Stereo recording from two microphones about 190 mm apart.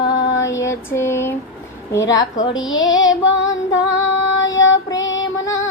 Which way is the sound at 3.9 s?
80° left.